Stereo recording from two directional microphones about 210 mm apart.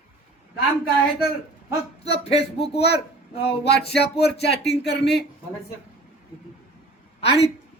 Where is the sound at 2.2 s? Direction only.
30° left (ahead or behind).